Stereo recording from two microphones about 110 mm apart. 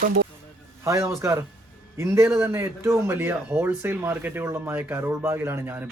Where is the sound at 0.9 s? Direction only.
25° right (ahead or behind).